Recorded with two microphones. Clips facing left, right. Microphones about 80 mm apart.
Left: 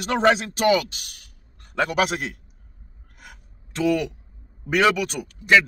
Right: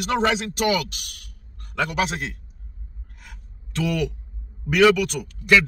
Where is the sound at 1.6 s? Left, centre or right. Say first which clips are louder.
Left 2 dB; left.